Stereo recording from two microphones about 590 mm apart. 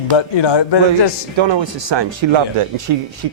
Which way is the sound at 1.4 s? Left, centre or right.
Right.